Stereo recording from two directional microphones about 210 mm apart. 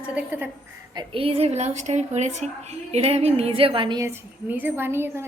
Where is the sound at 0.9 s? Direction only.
25° right (ahead or behind).